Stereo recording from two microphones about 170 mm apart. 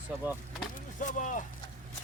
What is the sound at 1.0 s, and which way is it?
Speech, 50° left (ahead or behind).